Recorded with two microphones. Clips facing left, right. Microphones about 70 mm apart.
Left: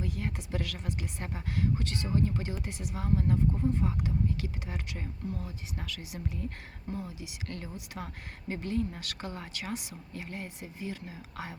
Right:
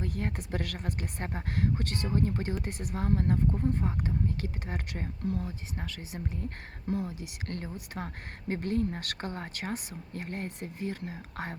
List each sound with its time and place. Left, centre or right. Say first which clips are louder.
0.0 s speech: right 2 dB; right